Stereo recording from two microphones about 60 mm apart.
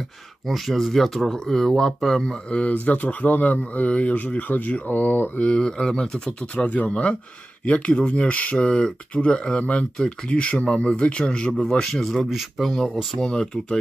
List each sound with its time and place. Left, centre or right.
0.5 s speech: centre
2.5 s speech: left
5.5 s speech: centre
12.0 s speech: centre
13.3 s speech: centre